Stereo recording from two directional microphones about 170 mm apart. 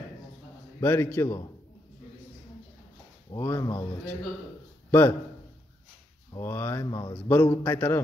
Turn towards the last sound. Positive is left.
turn(degrees=10)  # may be behind; listen again after turning